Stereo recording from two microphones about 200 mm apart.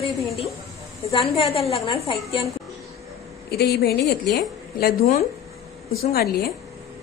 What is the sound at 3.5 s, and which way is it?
A woman's voice, 50° left (ahead or behind).